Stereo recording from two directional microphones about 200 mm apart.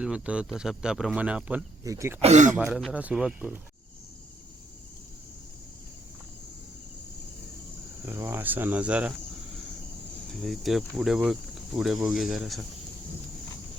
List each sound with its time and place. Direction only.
0.0 s speech: 5° right (ahead or behind)
2.2 s speech: 35° right (ahead or behind)
2.7 s speech: 5° right (ahead or behind)
8.0 s speech: 10° right (ahead or behind)
10.2 s speech: centre (ahead or behind)